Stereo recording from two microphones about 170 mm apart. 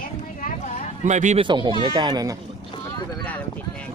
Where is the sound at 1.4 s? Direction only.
25° right (ahead or behind).